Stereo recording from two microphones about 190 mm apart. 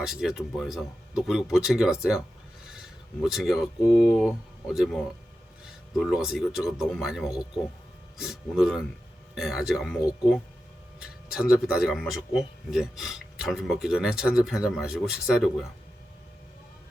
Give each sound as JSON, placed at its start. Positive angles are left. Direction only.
{"t": 0.0, "sound": "a man's voice", "side_deg": 0}
{"t": 2.6, "sound": "a sound", "side_deg": 0}
{"t": 3.3, "sound": "a man's voice", "side_deg": 0}
{"t": 11.3, "sound": "a man's voice", "side_deg": -5}